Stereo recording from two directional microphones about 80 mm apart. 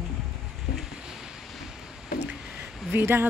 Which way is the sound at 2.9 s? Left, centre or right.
Right.